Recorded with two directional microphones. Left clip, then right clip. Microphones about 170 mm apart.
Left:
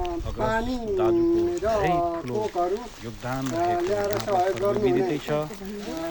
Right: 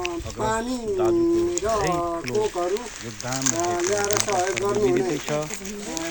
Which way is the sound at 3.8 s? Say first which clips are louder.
Right 2 dB; 30° right (ahead or behind).